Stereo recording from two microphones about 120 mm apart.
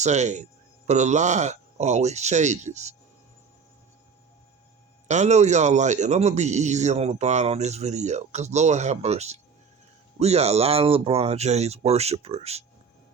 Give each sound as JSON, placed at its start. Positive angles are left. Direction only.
{"t": 0.0, "sound": "a man's voice", "side_deg": -75}
{"t": 5.0, "sound": "a man's voice", "side_deg": -75}